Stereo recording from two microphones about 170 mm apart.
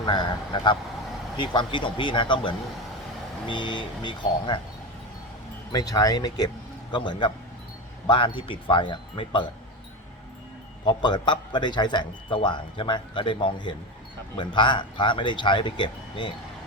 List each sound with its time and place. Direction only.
0.0 s a man's voice: 25° left (ahead or behind)
5.7 s a man's voice: 20° left (ahead or behind)
10.8 s a man's voice: 25° left (ahead or behind)